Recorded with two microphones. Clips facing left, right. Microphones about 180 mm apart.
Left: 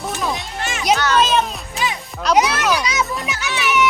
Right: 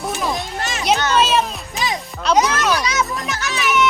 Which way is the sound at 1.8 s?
40° right (ahead or behind).